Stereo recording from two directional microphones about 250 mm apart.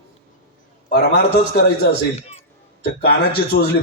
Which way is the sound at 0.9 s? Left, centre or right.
Left.